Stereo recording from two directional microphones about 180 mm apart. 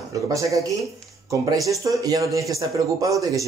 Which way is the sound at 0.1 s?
15° right (ahead or behind).